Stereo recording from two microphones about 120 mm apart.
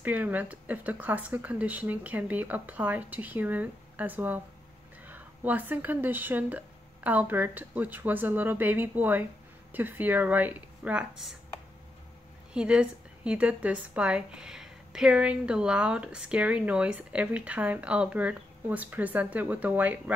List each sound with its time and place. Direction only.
0.0 s a woman's voice: 15° right (ahead or behind)
12.5 s a woman's voice: 10° right (ahead or behind)